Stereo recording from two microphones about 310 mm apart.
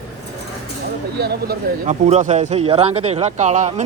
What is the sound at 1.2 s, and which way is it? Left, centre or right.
Speech, right.